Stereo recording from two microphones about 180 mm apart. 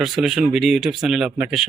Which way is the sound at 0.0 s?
Centre (ahead or behind).